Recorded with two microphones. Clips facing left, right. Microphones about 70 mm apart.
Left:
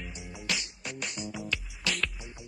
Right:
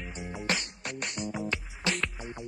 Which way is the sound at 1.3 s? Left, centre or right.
Right.